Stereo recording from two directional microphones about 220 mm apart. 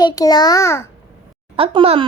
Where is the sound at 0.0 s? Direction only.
20° left (ahead or behind).